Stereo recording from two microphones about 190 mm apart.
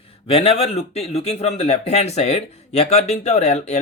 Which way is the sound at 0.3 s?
30° left (ahead or behind).